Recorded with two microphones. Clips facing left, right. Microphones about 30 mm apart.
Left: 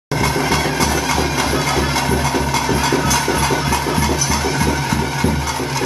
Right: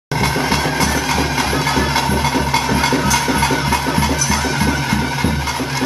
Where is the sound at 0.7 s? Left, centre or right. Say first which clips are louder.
Even; centre.